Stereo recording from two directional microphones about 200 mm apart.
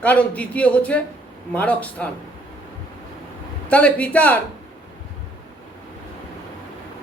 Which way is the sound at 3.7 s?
5° left (ahead or behind).